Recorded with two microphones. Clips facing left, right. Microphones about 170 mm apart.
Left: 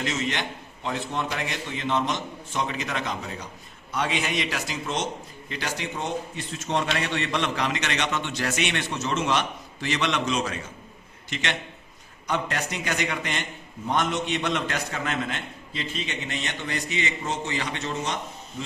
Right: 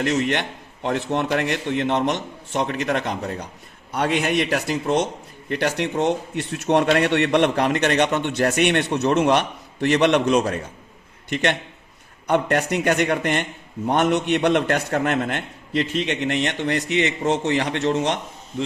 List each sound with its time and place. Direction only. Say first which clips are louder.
0.0 s a man's voice: right 7 dB; 60° right (ahead or behind)